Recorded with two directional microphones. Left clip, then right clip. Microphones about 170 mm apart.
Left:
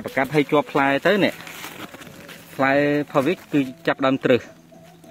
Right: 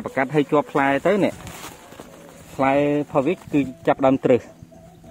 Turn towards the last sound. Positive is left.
turn(degrees=0)  # may be behind; listen again after turning